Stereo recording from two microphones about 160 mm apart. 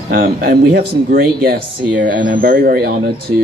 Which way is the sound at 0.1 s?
60° right (ahead or behind).